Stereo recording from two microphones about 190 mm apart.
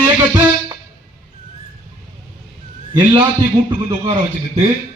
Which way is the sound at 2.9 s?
25° right (ahead or behind).